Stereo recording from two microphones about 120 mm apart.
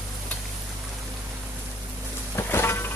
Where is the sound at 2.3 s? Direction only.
20° left (ahead or behind).